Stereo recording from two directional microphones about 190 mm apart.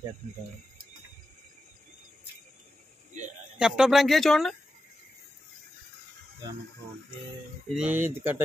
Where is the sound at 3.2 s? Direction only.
35° right (ahead or behind).